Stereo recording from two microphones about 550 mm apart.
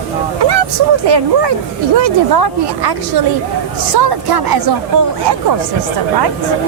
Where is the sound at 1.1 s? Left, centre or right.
Right.